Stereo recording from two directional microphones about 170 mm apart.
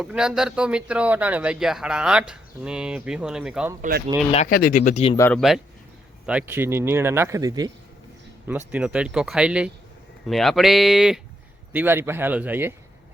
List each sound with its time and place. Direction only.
0.0 s speech: 5° right (ahead or behind)
3.8 s speech: 55° right (ahead or behind)
4.4 s speech: 55° left (ahead or behind)
5.3 s speech: centre (ahead or behind); by 7.7 s 20° right (ahead or behind)
8.4 s speech: 5° right (ahead or behind)